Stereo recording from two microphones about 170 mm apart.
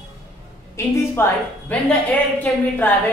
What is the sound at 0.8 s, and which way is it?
A woman's voice, 15° left (ahead or behind).